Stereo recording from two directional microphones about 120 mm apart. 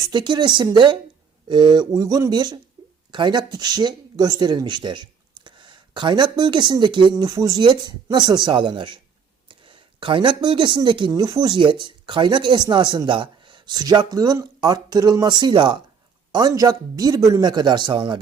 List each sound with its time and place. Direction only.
0.0 s speech: 40° right (ahead or behind)
7.3 s speech: 30° right (ahead or behind); by 11.1 s 45° right (ahead or behind)
11.1 s speech: 30° right (ahead or behind)